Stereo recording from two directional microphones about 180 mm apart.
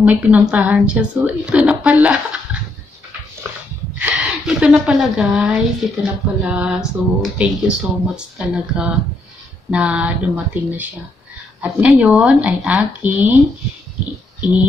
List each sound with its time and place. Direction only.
0.0 s a woman's voice: 10° right (ahead or behind)
3.4 s dog: 15° right (ahead or behind)
4.0 s a woman's voice: 5° right (ahead or behind)
14.4 s speech: 5° right (ahead or behind)